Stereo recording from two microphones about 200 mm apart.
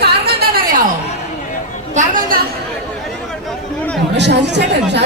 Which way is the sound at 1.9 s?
35° right (ahead or behind).